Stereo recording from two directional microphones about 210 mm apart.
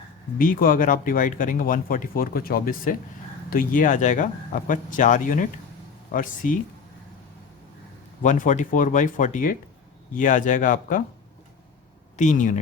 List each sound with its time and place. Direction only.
0.3 s speech: 40° left (ahead or behind)
8.2 s speech: 35° left (ahead or behind)
12.1 s speech: 35° left (ahead or behind)